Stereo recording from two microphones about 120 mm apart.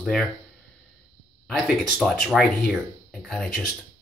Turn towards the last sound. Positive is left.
turn(degrees=5)  # may be behind; listen again after turning